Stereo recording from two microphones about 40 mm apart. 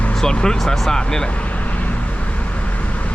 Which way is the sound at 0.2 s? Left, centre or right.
Centre.